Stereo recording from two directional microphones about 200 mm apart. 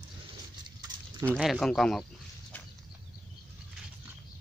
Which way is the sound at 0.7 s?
20° right (ahead or behind).